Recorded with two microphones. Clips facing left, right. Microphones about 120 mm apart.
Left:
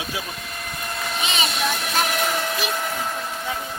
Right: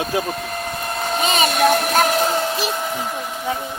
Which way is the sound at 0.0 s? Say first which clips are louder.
Right 9 dB; 50° right (ahead or behind).